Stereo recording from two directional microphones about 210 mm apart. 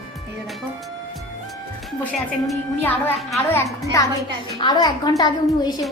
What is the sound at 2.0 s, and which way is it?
A woman's voice, 5° left (ahead or behind).